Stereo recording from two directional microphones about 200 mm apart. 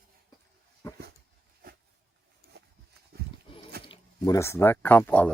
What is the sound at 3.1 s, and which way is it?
Horse, 50° right (ahead or behind).